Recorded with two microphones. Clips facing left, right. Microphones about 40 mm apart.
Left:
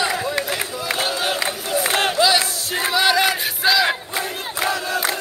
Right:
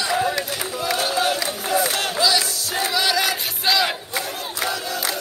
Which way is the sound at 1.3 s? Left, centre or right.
Left.